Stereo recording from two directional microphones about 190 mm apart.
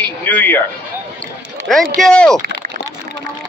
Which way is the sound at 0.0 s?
10° left (ahead or behind).